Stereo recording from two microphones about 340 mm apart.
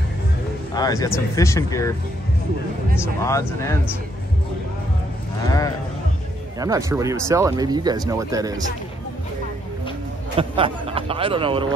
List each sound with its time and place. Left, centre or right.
0.7 s speech: centre
3.2 s speech: centre
5.4 s speech: centre
6.6 s speech: centre
10.3 s a man's voice: centre